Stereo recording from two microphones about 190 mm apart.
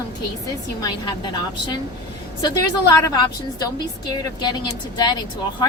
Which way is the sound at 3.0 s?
20° left (ahead or behind).